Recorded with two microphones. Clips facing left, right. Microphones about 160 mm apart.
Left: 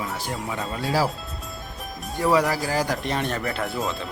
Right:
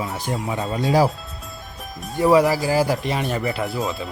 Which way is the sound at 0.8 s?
20° right (ahead or behind).